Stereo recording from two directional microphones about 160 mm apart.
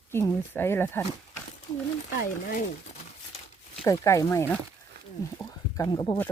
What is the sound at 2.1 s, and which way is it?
Speech, 60° left (ahead or behind).